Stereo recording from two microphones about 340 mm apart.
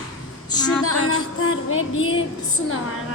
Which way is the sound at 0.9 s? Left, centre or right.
Left.